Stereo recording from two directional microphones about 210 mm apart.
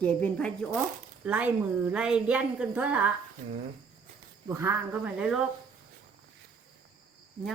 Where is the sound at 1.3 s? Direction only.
5° right (ahead or behind).